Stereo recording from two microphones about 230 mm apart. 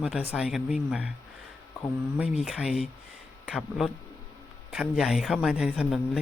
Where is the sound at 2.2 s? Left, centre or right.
Centre.